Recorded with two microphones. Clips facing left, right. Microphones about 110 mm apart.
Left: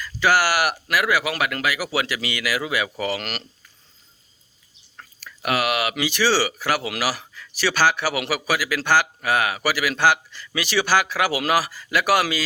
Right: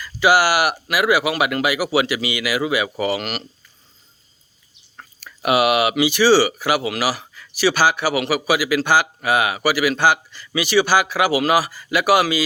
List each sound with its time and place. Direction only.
0.0 s speech: 10° right (ahead or behind)
4.9 s speech: 20° right (ahead or behind); by 12.4 s 5° right (ahead or behind)